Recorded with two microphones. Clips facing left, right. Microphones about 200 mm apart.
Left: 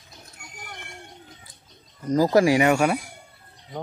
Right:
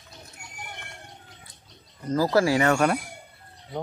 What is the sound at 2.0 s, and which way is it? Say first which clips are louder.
Speech: left 3 dB; 15° left (ahead or behind).